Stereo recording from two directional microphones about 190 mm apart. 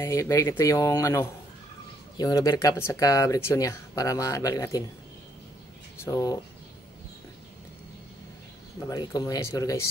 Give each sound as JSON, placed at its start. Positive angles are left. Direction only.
{"t": 0.0, "sound": "speech", "side_deg": 15}
{"t": 6.0, "sound": "speech", "side_deg": 20}
{"t": 8.8, "sound": "speech", "side_deg": 20}